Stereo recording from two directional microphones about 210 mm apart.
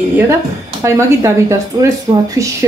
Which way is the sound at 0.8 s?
15° right (ahead or behind).